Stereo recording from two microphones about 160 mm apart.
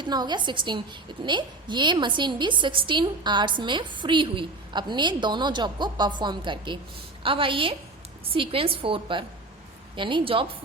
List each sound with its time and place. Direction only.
0.0 s a woman's voice: 25° right (ahead or behind)